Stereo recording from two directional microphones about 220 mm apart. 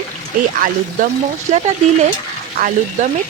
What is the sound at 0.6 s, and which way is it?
Music, 40° right (ahead or behind).